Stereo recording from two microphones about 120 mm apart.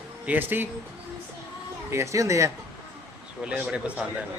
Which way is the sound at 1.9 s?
25° right (ahead or behind).